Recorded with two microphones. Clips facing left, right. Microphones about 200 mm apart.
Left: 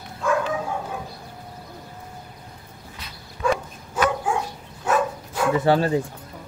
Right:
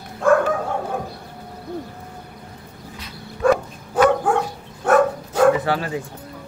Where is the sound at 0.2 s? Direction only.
55° right (ahead or behind).